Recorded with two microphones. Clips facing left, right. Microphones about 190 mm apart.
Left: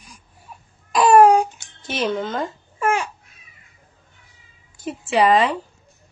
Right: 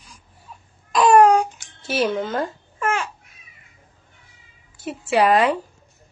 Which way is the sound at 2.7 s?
10° left (ahead or behind).